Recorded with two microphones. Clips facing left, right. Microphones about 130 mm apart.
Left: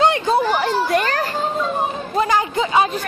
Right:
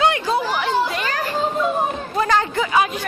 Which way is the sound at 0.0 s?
30° left (ahead or behind).